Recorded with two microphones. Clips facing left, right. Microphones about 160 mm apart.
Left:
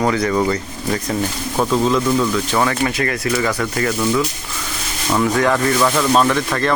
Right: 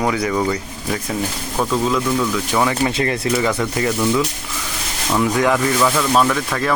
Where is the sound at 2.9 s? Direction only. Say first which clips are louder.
Right 1 dB; 25° right (ahead or behind).